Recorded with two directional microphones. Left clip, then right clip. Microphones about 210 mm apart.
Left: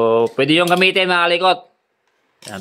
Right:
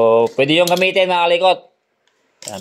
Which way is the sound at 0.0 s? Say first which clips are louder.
Right 2 dB; 15° left (ahead or behind).